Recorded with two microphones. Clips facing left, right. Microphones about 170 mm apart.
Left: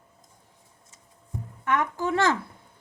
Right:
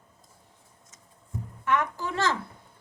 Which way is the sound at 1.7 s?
50° left (ahead or behind).